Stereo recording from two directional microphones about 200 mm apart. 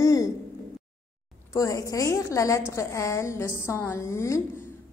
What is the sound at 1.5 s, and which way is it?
A woman's voice, 15° left (ahead or behind).